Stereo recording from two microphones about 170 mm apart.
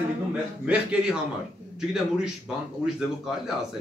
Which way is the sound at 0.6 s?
5° right (ahead or behind).